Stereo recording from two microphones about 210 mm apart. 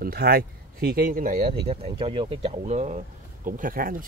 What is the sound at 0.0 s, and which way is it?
Speech, 45° right (ahead or behind).